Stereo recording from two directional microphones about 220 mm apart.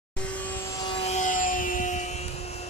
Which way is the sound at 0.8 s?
25° left (ahead or behind).